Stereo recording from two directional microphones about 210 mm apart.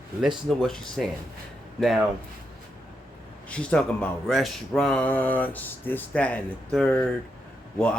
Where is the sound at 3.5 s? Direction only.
5° left (ahead or behind).